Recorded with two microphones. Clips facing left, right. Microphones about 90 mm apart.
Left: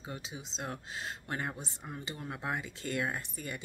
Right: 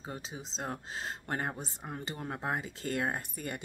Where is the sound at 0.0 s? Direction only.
40° right (ahead or behind).